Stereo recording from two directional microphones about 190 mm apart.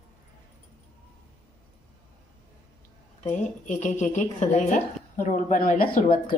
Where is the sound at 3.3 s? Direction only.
40° left (ahead or behind).